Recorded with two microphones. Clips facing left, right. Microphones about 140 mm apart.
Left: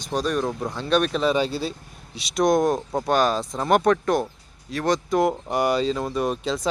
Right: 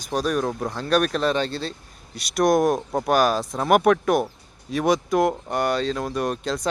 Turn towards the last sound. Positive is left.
turn(degrees=5)  # may be behind; listen again after turning